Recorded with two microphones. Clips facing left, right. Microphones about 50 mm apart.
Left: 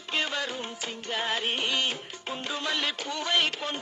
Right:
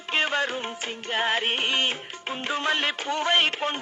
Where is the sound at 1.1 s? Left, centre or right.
Right.